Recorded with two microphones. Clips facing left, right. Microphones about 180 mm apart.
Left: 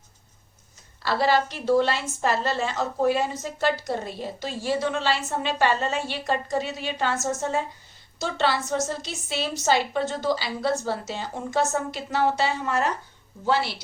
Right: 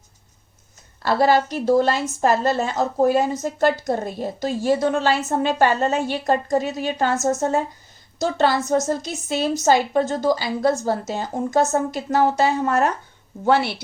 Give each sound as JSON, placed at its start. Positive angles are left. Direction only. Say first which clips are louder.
{"t": 1.0, "sound": "a woman's voice", "louder": "right 5 dB", "side_deg": -45}
{"t": 13.4, "sound": "speech", "louder": "right 6 dB", "side_deg": -60}